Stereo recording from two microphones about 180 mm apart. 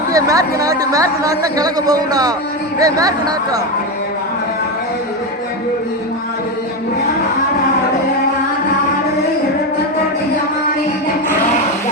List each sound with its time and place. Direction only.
0.1 s a man's voice: 20° right (ahead or behind)